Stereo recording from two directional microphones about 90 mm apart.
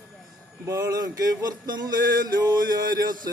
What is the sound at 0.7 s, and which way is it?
Speech, 40° right (ahead or behind).